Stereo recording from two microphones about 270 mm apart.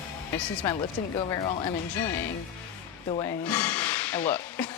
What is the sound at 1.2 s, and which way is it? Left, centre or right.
Speech, centre.